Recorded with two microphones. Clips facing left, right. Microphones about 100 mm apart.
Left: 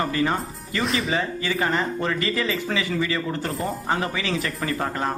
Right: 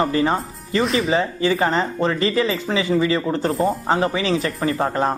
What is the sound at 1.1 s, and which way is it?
Speech, 30° right (ahead or behind).